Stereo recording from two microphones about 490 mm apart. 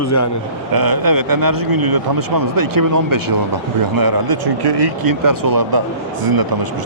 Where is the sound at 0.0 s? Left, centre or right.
Left.